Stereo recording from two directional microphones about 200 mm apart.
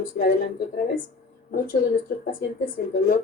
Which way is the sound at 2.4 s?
45° left (ahead or behind).